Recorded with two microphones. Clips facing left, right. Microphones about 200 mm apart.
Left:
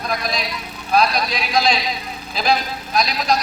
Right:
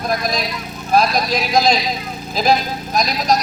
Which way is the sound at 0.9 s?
45° right (ahead or behind).